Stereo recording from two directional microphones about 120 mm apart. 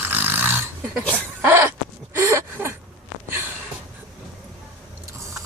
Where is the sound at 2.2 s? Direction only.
20° right (ahead or behind).